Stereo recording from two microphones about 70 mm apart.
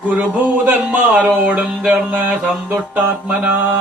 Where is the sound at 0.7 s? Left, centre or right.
Right.